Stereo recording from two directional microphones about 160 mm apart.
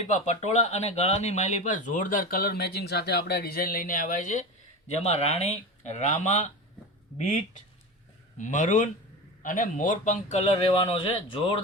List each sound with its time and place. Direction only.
0.1 s speech: 45° left (ahead or behind)
4.9 s a man's voice: 40° left (ahead or behind)
8.4 s a man's voice: 50° left (ahead or behind); by 11.5 s 30° left (ahead or behind)